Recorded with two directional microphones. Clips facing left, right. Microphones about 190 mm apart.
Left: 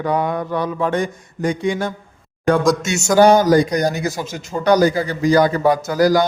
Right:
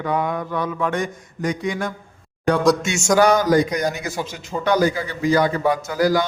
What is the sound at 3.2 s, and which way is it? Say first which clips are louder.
A man's voice: left 5 dB; 30° left (ahead or behind).